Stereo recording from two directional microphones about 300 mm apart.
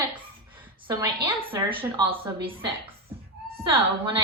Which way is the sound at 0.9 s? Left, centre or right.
Centre.